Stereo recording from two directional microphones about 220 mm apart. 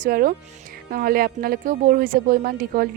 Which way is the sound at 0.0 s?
40° right (ahead or behind).